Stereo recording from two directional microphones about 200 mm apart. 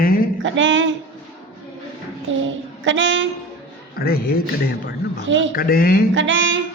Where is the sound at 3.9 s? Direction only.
50° left (ahead or behind).